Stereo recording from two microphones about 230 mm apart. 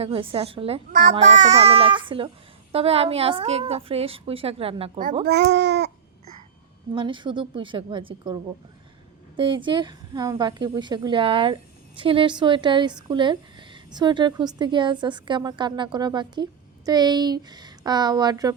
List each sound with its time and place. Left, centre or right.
0.0 s speech: right
5.2 s a child's voice: right
6.9 s speech: right